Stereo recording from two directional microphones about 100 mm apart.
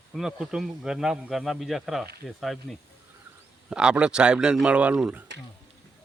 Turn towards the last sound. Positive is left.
turn(degrees=-10)  # may be behind; listen again after turning